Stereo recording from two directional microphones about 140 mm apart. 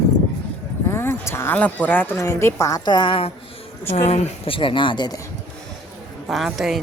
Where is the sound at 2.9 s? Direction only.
35° left (ahead or behind).